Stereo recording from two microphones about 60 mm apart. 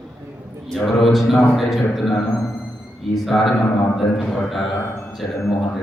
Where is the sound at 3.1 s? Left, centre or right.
Centre.